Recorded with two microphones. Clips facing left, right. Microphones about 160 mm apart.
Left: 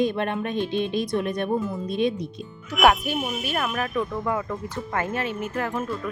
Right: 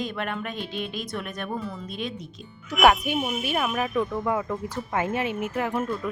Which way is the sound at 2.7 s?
Centre (ahead or behind).